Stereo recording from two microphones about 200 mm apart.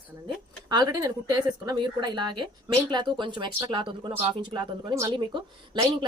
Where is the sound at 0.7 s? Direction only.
20° right (ahead or behind).